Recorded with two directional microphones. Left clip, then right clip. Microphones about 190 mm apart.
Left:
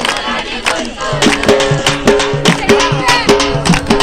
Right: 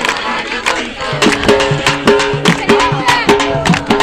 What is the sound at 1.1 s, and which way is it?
Music, 45° right (ahead or behind).